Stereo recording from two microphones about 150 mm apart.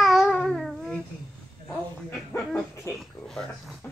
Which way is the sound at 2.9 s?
Centre (ahead or behind).